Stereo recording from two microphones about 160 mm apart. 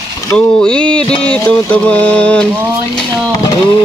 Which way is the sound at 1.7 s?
10° left (ahead or behind).